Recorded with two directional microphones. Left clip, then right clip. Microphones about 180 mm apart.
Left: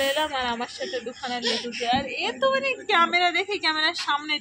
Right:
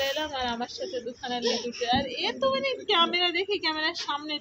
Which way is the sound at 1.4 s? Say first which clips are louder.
Left 1 dB; 15° right (ahead or behind).